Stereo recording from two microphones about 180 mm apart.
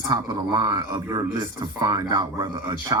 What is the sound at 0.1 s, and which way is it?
A woman's voice, 20° right (ahead or behind).